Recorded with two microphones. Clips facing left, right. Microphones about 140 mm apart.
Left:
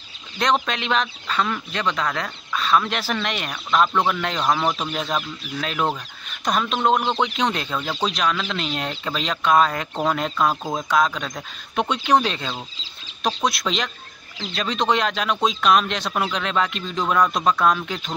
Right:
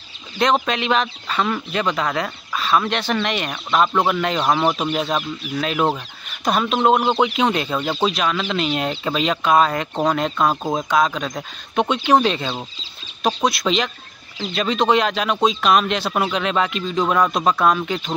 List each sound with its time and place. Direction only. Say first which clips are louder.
0.4 s speech: right 3 dB; centre (ahead or behind)
4.4 s speech: right 2 dB; 20° right (ahead or behind)
4.9 s speech: right 4 dB; centre (ahead or behind)
6.9 s speech: right 4 dB; 10° right (ahead or behind)
10.5 s speech: right 4 dB; 20° right (ahead or behind)
10.8 s speech: even; 5° right (ahead or behind)